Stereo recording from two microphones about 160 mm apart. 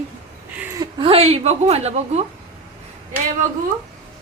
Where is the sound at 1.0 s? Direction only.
35° right (ahead or behind).